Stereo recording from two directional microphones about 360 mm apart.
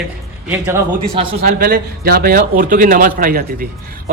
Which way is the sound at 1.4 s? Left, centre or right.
Right.